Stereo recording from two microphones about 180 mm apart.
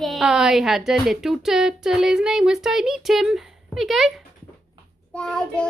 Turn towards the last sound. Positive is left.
turn(degrees=5)  # may be behind; listen again after turning